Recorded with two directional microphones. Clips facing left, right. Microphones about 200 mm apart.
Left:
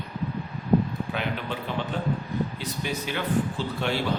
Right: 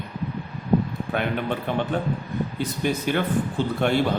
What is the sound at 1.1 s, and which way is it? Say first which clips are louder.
A man's voice: right 8 dB; 55° right (ahead or behind).